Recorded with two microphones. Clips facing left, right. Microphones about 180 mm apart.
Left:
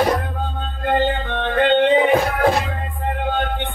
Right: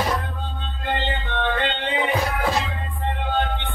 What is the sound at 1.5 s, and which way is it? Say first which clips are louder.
Music: left 10 dB; 50° left (ahead or behind).